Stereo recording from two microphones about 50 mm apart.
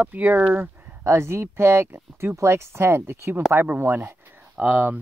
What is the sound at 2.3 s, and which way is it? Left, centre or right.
Speech, right.